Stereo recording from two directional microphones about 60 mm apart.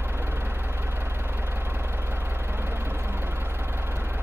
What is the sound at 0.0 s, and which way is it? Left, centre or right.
Vehicle, right.